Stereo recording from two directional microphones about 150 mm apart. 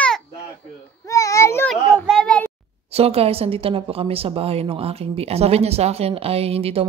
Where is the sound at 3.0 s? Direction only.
40° right (ahead or behind).